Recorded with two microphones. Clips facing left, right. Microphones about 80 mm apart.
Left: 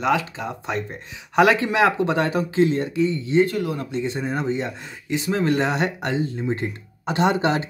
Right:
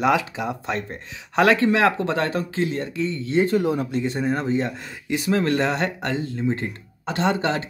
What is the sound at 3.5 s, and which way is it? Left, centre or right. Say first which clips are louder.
Speech: right 4 dB; right.